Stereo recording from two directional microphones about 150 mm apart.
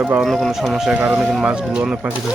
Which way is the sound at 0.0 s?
10° right (ahead or behind).